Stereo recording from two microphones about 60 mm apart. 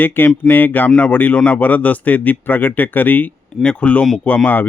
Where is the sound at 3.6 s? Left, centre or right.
Centre.